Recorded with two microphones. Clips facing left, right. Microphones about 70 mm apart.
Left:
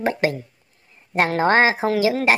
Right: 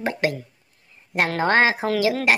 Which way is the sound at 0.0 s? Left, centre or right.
Left.